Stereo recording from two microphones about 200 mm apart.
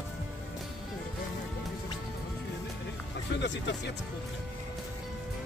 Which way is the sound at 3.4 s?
60° left (ahead or behind).